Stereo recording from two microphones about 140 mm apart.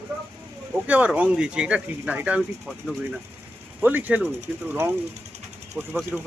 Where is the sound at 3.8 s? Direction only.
10° right (ahead or behind).